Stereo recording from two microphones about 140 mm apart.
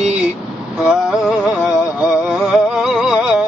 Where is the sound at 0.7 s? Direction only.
5° right (ahead or behind).